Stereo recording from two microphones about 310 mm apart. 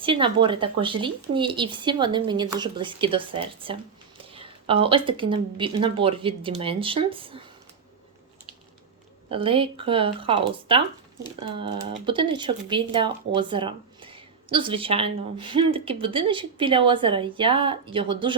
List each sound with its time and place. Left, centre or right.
0.0 s speech: centre
9.3 s speech: centre